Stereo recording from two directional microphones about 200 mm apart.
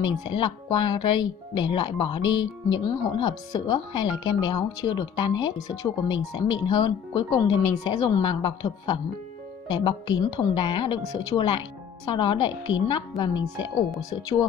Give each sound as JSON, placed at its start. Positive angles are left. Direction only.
{"t": 0.0, "sound": "speech", "side_deg": 20}
{"t": 2.2, "sound": "speech", "side_deg": 70}
{"t": 2.8, "sound": "speech", "side_deg": 20}